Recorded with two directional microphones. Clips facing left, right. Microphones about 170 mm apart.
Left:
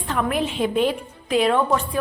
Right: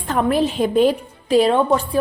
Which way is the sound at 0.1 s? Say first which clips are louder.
Right 5 dB; 35° right (ahead or behind).